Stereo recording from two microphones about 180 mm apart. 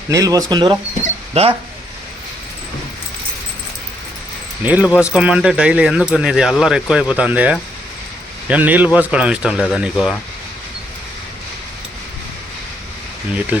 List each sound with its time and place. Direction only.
0.1 s speech: 20° right (ahead or behind)
1.3 s speech: 35° right (ahead or behind)
4.6 s speech: 10° right (ahead or behind)
13.5 s speech: 10° right (ahead or behind)